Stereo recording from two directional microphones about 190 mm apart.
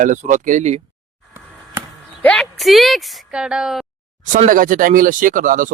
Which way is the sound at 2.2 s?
5° left (ahead or behind).